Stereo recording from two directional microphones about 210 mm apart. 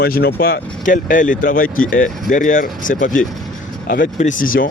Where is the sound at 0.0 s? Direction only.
45° left (ahead or behind).